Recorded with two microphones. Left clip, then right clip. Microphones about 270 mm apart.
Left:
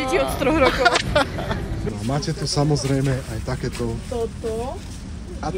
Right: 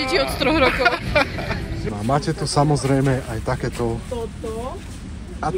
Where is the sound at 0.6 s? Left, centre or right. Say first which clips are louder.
Left 1 dB; centre.